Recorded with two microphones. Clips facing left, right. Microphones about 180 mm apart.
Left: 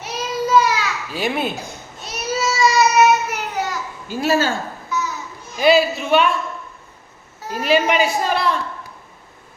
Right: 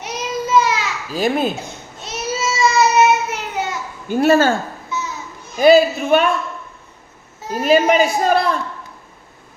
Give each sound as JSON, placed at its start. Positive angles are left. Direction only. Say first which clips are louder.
{"t": 0.0, "sound": "child singing", "louder": "even", "side_deg": -20}
{"t": 1.1, "sound": "a child's voice", "louder": "right 5 dB", "side_deg": -40}
{"t": 2.0, "sound": "child singing", "louder": "even", "side_deg": -25}
{"t": 4.1, "sound": "speech", "louder": "right 5 dB", "side_deg": -55}
{"t": 4.9, "sound": "children playing", "louder": "left 2 dB", "side_deg": -25}
{"t": 5.5, "sound": "a woman's voice", "louder": "right 4 dB", "side_deg": -45}
{"t": 7.5, "sound": "a woman's voice", "louder": "right 4 dB", "side_deg": -45}